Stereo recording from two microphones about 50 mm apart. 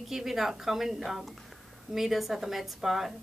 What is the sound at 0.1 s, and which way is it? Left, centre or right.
A woman's voice, centre.